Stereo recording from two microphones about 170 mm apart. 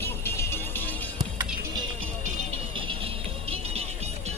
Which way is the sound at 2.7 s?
30° right (ahead or behind).